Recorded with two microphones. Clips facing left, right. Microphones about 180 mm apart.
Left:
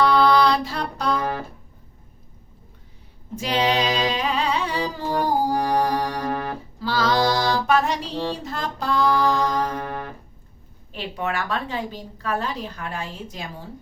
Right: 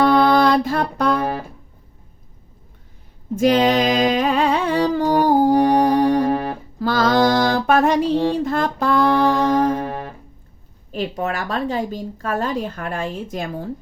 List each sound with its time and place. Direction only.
0.0 s a sound: 50° right (ahead or behind)
3.3 s music: 50° right (ahead or behind)
5.5 s music: 25° right (ahead or behind)
6.7 s music: 50° right (ahead or behind)
9.6 s music: 25° right (ahead or behind)
10.9 s a woman's voice: 40° right (ahead or behind)